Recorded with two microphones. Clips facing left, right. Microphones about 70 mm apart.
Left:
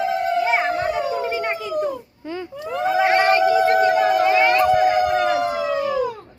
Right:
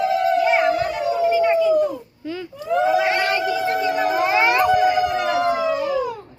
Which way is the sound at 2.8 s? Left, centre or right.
Left.